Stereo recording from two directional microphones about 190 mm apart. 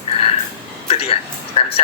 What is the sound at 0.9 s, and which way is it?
Speech, 30° left (ahead or behind).